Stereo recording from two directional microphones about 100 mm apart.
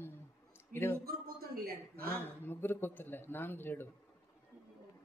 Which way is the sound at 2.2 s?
20° left (ahead or behind).